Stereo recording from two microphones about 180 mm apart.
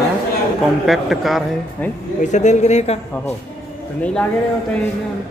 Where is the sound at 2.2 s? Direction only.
40° left (ahead or behind).